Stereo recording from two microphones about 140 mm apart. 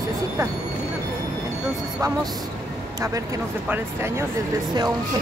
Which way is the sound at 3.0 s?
25° right (ahead or behind).